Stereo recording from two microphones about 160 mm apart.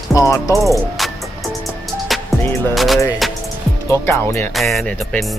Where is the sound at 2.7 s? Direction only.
Centre (ahead or behind).